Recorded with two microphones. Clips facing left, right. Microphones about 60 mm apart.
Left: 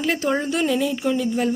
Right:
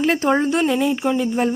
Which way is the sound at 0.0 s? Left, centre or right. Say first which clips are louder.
Right 4 dB; right.